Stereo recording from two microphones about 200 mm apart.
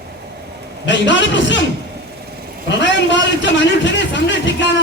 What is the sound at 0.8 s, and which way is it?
Speech, 65° left (ahead or behind).